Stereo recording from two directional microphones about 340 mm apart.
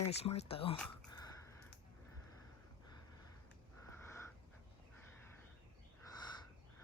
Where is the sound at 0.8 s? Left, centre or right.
Centre.